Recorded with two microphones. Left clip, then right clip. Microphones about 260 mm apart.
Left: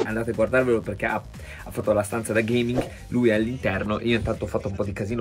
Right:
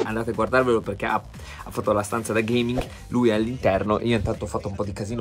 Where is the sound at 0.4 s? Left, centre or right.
Centre.